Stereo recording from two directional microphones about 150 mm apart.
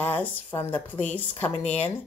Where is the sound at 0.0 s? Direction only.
10° left (ahead or behind).